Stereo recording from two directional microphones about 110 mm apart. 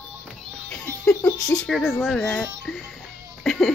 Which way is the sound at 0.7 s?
20° left (ahead or behind).